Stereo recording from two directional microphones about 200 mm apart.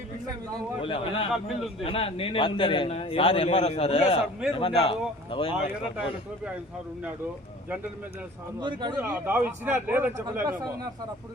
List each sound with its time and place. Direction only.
0.9 s a man's voice: 30° left (ahead or behind)
1.3 s a man's voice: centre (ahead or behind)
1.8 s a man's voice: 30° left (ahead or behind)
8.6 s speech: 20° right (ahead or behind)
9.0 s a man's voice: 10° right (ahead or behind)